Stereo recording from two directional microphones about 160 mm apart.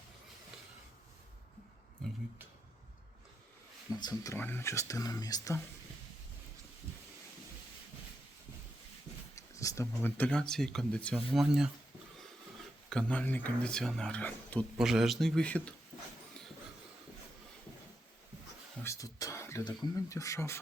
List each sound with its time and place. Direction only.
4.0 s speech: 20° left (ahead or behind)
9.3 s speech: 20° left (ahead or behind); by 11.7 s 5° right (ahead or behind)
12.9 s speech: 5° left (ahead or behind)
14.8 s a man's voice: 5° right (ahead or behind)
18.8 s speech: 20° left (ahead or behind)